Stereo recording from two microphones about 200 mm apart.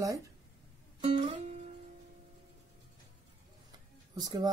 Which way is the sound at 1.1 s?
25° right (ahead or behind).